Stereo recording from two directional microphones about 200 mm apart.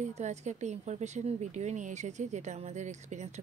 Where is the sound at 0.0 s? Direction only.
35° right (ahead or behind).